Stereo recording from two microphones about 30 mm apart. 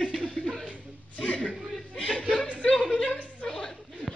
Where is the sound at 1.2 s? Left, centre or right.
Left.